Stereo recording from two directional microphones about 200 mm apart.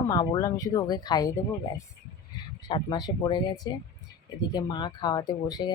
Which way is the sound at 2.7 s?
20° left (ahead or behind).